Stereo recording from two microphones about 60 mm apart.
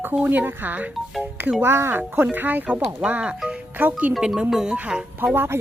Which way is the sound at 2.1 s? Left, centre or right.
Right.